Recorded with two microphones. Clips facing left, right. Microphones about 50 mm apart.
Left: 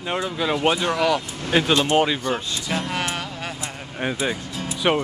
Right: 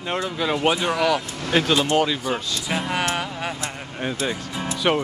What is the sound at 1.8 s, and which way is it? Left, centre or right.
Speech, left.